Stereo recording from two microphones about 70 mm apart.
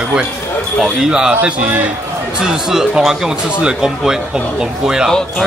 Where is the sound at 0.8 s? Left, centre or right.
Centre.